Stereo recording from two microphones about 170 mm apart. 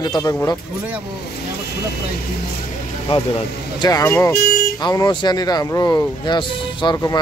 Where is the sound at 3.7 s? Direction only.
20° left (ahead or behind).